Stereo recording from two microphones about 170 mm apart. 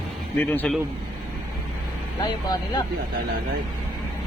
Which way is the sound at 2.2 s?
25° left (ahead or behind).